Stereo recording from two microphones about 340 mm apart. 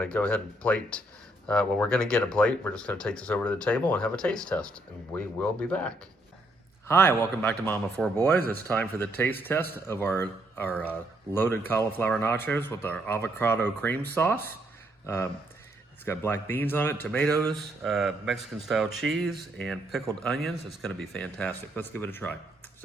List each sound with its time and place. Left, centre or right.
0.0 s speech: centre